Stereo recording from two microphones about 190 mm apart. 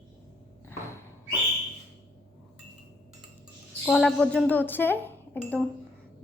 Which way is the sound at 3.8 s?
5° left (ahead or behind).